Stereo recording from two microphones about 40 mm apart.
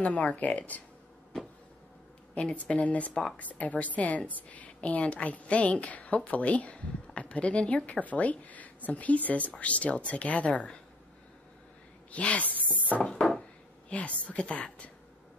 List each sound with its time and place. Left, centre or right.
0.0 s a woman's voice: left
2.3 s a woman's voice: left
12.1 s speech: left
13.8 s a woman's voice: left